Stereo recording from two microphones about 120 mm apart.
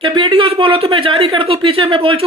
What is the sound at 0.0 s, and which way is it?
Speech, 45° right (ahead or behind).